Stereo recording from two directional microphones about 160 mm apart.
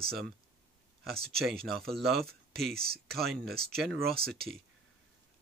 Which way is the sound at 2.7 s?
75° right (ahead or behind).